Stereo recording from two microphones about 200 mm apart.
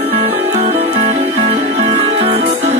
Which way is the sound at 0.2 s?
30° right (ahead or behind).